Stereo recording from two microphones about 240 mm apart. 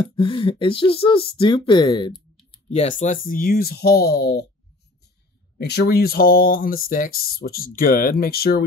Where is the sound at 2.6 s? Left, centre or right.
Left.